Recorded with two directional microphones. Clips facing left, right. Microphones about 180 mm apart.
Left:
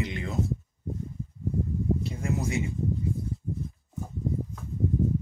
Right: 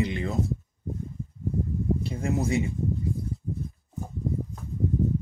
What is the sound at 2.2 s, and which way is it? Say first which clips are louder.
Speech: right 3 dB; 35° right (ahead or behind).